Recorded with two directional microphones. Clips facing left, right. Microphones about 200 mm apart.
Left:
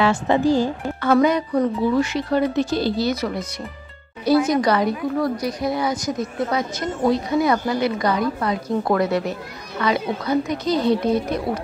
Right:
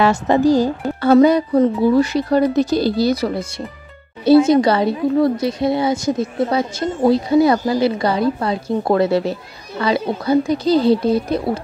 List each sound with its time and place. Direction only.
0.0 s a woman's voice: 40° right (ahead or behind)